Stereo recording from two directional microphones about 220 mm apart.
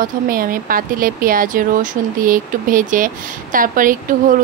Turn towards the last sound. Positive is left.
turn(degrees=-40)  # may be behind; listen again after turning